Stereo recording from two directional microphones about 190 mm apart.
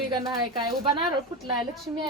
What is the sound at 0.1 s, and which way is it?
Speech, 25° right (ahead or behind).